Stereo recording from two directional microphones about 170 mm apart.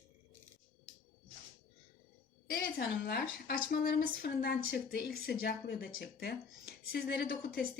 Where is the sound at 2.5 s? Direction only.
65° left (ahead or behind).